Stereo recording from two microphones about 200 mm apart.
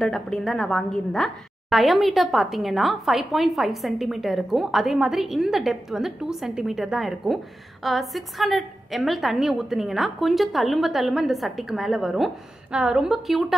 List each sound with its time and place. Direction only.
0.0 s a woman's voice: centre (ahead or behind)